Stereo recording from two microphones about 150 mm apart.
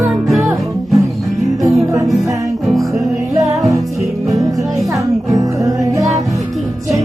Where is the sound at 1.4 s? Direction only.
20° right (ahead or behind).